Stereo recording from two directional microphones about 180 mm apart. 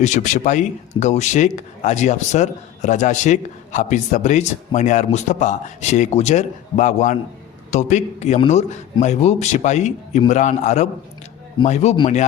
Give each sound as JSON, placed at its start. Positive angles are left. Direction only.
{"t": 0.0, "sound": "a man's voice", "side_deg": 45}